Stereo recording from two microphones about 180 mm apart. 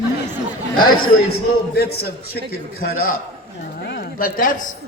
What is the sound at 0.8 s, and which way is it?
A man's voice, 60° left (ahead or behind).